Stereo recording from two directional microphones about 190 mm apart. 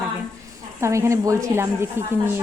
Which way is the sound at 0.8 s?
15° right (ahead or behind).